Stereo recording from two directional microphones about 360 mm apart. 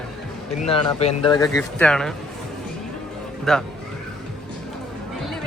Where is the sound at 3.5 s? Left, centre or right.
Centre.